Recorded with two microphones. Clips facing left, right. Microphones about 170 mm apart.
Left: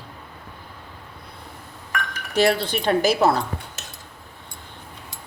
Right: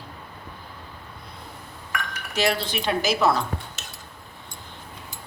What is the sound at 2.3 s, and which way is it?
Speech, 55° left (ahead or behind).